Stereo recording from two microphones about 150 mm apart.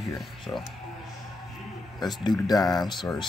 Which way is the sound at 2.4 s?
25° left (ahead or behind).